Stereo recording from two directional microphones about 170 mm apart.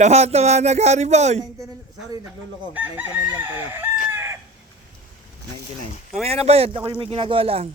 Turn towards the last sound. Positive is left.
turn(degrees=-35)  # may be behind; listen again after turning